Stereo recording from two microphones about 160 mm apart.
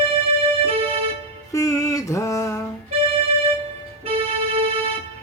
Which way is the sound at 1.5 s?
20° left (ahead or behind).